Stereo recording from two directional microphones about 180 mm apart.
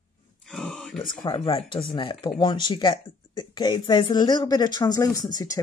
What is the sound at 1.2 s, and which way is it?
Speech, 30° left (ahead or behind).